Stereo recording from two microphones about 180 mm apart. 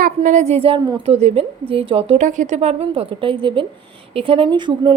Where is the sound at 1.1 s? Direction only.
35° right (ahead or behind).